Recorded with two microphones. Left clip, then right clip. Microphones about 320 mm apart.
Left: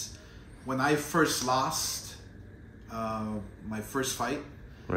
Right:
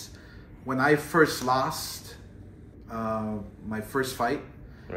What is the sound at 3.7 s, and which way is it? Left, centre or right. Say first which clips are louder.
Speech: right 3 dB; centre.